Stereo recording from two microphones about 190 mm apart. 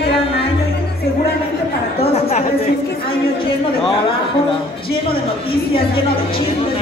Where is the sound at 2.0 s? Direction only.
30° left (ahead or behind).